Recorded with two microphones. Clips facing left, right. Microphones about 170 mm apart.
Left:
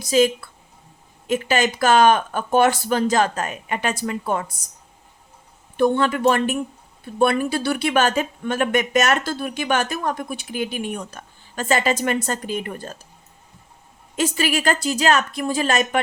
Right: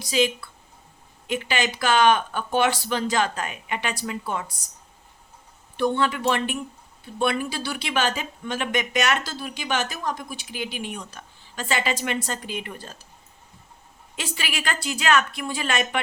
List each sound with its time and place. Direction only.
0.0 s speech: 45° left (ahead or behind)
5.7 s speech: 50° left (ahead or behind)
14.2 s a woman's voice: 45° left (ahead or behind)